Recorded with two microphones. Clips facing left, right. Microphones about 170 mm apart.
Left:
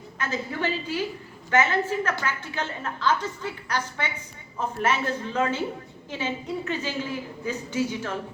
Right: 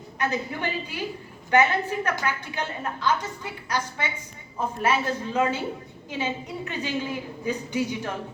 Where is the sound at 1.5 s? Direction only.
15° right (ahead or behind).